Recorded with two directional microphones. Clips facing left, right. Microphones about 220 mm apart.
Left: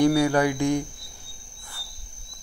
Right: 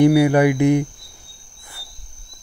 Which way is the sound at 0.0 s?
15° right (ahead or behind).